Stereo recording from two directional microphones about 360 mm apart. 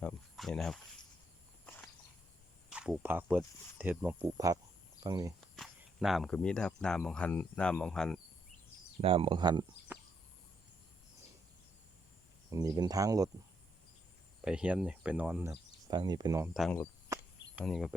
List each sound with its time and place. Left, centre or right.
0.0 s speech: centre
1.6 s walk: centre
2.6 s speech: centre
9.0 s speech: centre
12.5 s speech: centre
14.4 s speech: centre
17.1 s cricket: centre